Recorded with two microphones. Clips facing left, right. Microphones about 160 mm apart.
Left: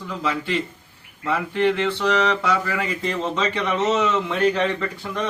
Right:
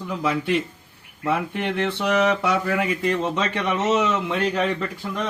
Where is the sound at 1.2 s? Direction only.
15° right (ahead or behind).